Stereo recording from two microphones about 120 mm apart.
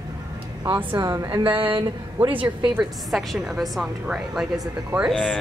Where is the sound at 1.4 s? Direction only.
45° right (ahead or behind).